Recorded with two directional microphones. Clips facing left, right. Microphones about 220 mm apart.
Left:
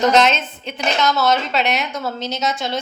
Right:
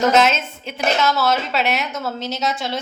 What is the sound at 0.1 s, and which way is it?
A woman's voice, 5° right (ahead or behind).